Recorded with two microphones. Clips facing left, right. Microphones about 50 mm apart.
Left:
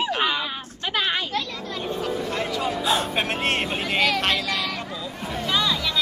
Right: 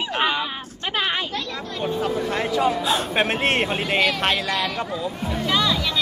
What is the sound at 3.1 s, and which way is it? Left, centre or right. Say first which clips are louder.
Speech: right 3 dB; centre.